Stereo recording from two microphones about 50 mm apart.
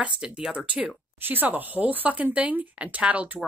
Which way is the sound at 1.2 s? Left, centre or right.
Right.